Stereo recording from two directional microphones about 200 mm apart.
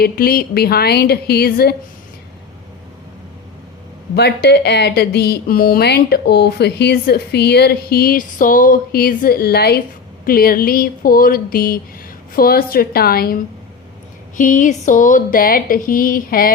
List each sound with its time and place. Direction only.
0.0 s speech: 50° left (ahead or behind)
4.1 s speech: 55° left (ahead or behind)